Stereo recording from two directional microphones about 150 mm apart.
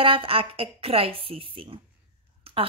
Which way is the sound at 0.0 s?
35° right (ahead or behind).